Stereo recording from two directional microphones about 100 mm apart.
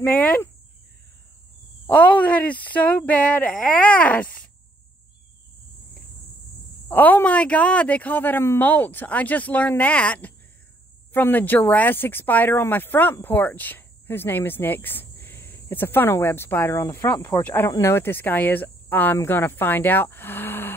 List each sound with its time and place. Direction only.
0.0 s speech: 15° left (ahead or behind)
1.9 s speech: 15° left (ahead or behind)
6.9 s speech: 20° left (ahead or behind)
17.6 s speech: 30° left (ahead or behind)